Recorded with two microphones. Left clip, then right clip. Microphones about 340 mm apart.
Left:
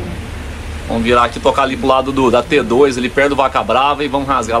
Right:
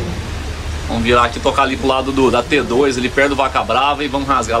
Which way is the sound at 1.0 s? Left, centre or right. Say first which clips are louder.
Left 1 dB; centre.